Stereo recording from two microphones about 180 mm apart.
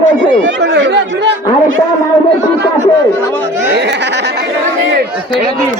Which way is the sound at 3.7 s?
70° right (ahead or behind).